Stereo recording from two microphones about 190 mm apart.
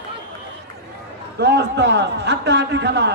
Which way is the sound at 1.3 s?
65° right (ahead or behind).